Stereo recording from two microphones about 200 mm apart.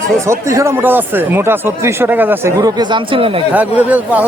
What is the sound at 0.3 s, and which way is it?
Speech, 15° right (ahead or behind).